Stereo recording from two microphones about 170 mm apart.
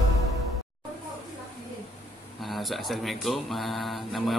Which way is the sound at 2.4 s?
Centre (ahead or behind).